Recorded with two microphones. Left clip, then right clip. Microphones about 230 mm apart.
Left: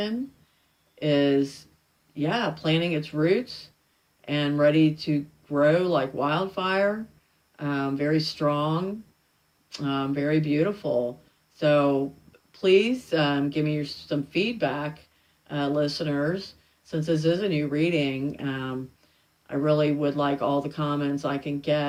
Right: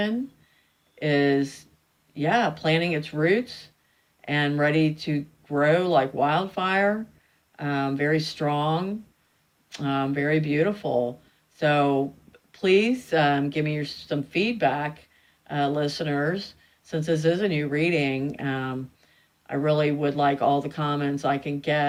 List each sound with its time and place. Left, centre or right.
0.9 s speech: right